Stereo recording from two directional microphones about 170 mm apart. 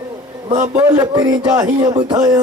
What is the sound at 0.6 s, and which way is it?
Speech, 20° right (ahead or behind).